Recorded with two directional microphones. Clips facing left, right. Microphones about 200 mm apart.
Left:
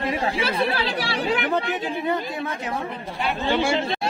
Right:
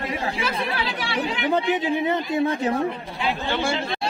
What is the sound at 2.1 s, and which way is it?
Speech, 30° right (ahead or behind).